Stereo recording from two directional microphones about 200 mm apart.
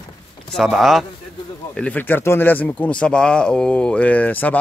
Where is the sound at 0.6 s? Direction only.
Centre (ahead or behind).